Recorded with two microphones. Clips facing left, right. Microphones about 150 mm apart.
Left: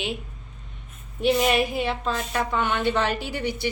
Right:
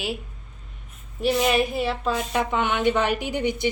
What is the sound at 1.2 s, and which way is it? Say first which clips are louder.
A woman's voice: even; centre (ahead or behind).